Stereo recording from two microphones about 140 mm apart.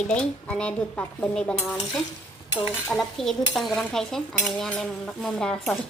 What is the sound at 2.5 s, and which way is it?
Cutlery, 40° left (ahead or behind).